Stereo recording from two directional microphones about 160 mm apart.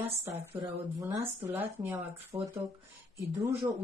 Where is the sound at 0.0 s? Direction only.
15° right (ahead or behind).